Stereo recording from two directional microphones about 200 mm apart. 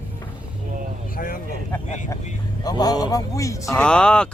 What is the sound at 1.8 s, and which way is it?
Speech, 35° left (ahead or behind).